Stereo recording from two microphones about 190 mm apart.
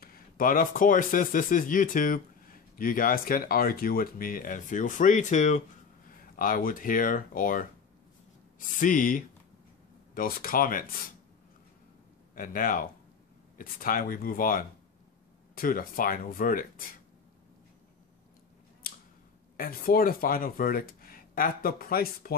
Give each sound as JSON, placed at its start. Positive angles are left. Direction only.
{"t": 0.0, "sound": "speech", "side_deg": 50}
{"t": 12.4, "sound": "speech", "side_deg": 50}
{"t": 18.8, "sound": "scissors", "side_deg": 50}
{"t": 19.5, "sound": "speech", "side_deg": 50}